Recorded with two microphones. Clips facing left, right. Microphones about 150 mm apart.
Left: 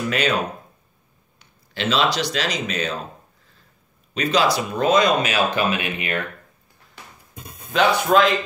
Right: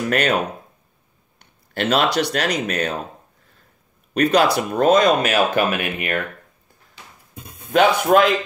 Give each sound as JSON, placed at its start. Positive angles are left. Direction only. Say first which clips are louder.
{"t": 0.1, "sound": "speech", "louder": "right 3 dB", "side_deg": -55}
{"t": 1.4, "sound": "speech", "louder": "right 3 dB", "side_deg": -55}
{"t": 4.1, "sound": "speech", "louder": "right 3 dB", "side_deg": -55}
{"t": 7.7, "sound": "speech", "louder": "right 3 dB", "side_deg": -55}